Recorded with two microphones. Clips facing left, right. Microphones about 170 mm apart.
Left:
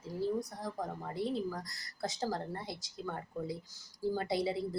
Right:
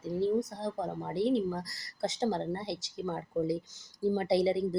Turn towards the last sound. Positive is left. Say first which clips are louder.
# right 7 dB
turn(degrees=-25)  # may be behind; listen again after turning